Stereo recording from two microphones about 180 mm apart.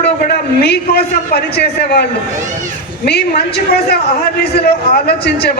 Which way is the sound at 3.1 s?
65° left (ahead or behind).